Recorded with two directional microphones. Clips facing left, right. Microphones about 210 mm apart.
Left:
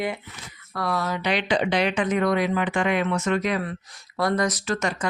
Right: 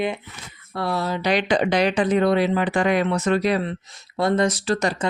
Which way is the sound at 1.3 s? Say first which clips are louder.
Right 3 dB; 45° right (ahead or behind).